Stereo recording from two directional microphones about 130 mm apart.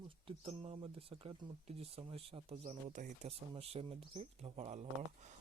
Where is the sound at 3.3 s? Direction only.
50° right (ahead or behind).